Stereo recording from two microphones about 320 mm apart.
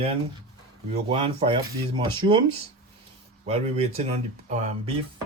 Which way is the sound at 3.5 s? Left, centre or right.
Centre.